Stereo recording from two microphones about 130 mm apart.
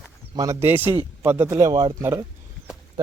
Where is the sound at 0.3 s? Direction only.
25° right (ahead or behind).